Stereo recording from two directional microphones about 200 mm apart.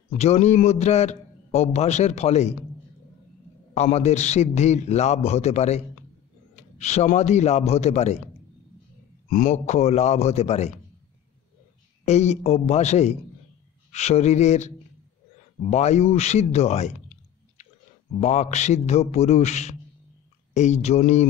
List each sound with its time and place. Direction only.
0.2 s a man's voice: 35° left (ahead or behind)
3.7 s a man's voice: 35° left (ahead or behind)
9.3 s a man's voice: 40° left (ahead or behind)
12.0 s a man's voice: 35° left (ahead or behind)
15.7 s a man's voice: 35° left (ahead or behind)
18.2 s a man's voice: 35° left (ahead or behind)